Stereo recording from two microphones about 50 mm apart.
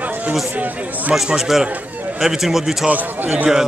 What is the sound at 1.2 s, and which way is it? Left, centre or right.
A man's voice, centre.